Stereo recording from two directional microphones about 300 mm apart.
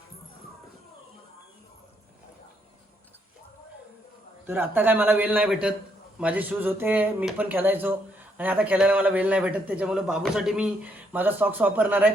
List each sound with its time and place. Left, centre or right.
4.4 s a man's voice: centre